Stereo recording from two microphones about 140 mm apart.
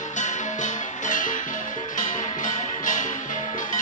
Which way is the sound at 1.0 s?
65° left (ahead or behind).